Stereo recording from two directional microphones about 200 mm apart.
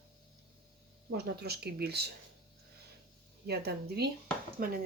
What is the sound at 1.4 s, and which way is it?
Speech, 55° right (ahead or behind).